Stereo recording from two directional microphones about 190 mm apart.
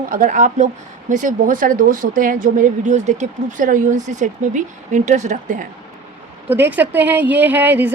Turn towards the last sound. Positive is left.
turn(degrees=-10)  # may be behind; listen again after turning